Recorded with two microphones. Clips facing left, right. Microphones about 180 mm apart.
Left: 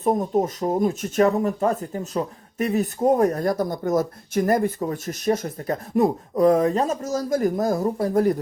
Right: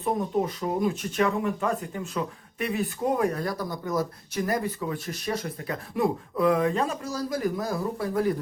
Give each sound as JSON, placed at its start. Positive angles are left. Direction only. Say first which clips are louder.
{"t": 0.0, "sound": "speech", "louder": "left 5 dB", "side_deg": 45}